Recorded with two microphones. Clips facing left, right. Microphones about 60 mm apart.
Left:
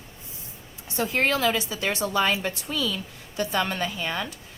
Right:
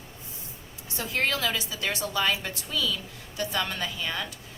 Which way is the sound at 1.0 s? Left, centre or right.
Left.